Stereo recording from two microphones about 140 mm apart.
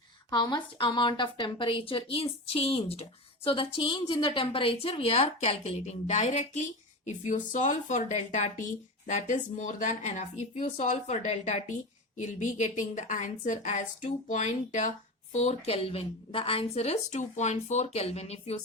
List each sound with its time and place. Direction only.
0.3 s a woman's voice: 30° left (ahead or behind); by 18.5 s 45° left (ahead or behind)